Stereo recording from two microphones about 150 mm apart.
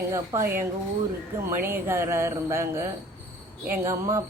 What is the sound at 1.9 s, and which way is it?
Speech, 15° right (ahead or behind).